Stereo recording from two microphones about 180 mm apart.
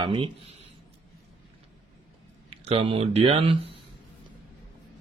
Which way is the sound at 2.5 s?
35° right (ahead or behind).